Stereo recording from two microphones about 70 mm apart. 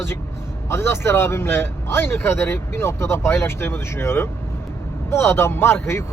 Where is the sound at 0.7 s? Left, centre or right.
Left.